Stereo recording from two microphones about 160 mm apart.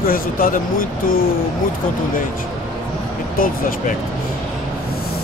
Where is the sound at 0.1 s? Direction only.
60° left (ahead or behind).